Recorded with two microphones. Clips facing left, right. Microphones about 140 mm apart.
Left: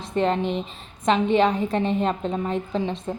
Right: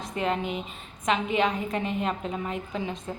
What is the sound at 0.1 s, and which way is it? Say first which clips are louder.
A woman's voice: left 6 dB; 35° left (ahead or behind).